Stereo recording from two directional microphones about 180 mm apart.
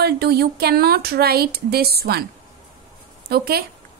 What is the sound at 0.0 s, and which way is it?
A woman's voice, 60° right (ahead or behind).